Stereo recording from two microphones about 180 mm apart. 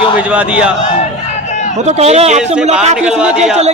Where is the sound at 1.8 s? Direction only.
40° right (ahead or behind).